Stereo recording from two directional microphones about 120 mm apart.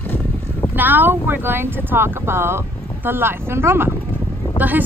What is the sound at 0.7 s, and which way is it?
Speech, 15° right (ahead or behind).